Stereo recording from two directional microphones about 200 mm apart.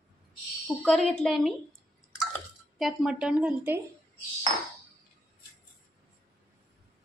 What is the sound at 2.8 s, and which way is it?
A woman's voice, 5° right (ahead or behind).